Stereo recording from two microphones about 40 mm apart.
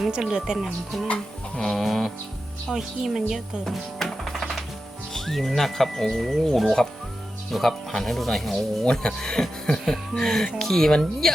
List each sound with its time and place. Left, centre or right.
0.1 s speech: centre
1.0 s music: left
1.6 s a woman's voice: centre
2.6 s speech: centre
3.6 s music: centre
5.1 s a woman's voice: centre
8.8 s a woman's voice: centre